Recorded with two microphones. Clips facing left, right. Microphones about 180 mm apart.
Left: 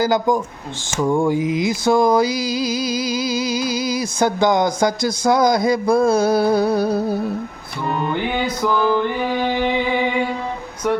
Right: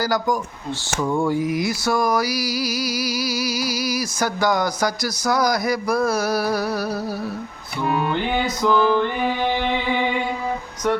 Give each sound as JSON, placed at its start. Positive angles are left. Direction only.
{"t": 0.0, "sound": "mantra", "side_deg": 25}
{"t": 7.9, "sound": "music", "side_deg": -5}
{"t": 8.6, "sound": "music", "side_deg": 10}